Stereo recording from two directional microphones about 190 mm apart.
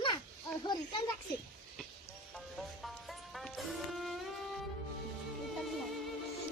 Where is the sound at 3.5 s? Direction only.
Centre (ahead or behind).